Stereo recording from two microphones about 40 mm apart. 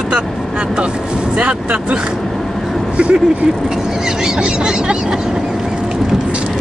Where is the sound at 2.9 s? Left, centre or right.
Right.